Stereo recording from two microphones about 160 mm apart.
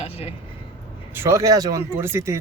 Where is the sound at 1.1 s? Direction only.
15° right (ahead or behind).